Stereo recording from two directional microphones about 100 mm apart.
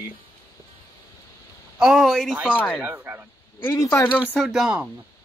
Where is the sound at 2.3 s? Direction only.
10° right (ahead or behind).